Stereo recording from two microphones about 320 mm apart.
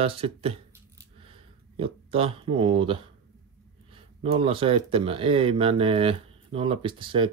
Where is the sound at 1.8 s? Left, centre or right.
Centre.